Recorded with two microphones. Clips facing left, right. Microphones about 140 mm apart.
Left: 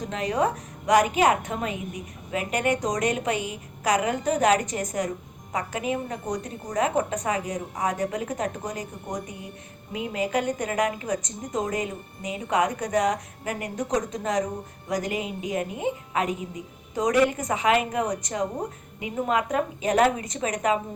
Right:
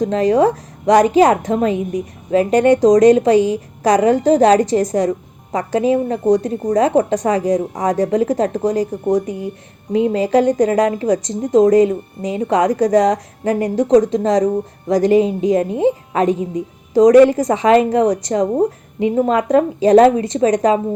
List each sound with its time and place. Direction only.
0.0 s a woman's voice: 35° right (ahead or behind)